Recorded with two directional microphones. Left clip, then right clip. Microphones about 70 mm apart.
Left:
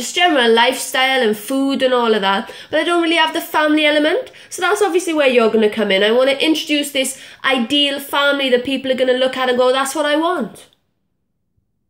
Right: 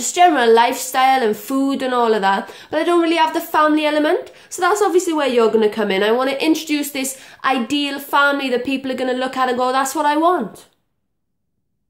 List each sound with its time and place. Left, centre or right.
0.0 s a woman's voice: right